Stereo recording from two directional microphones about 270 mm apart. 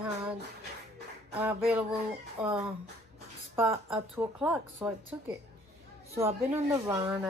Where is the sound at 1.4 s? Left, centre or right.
Centre.